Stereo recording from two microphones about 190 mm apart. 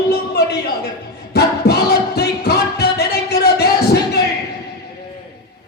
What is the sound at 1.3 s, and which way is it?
Music, 60° left (ahead or behind).